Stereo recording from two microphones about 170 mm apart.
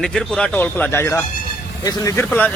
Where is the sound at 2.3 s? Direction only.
10° left (ahead or behind).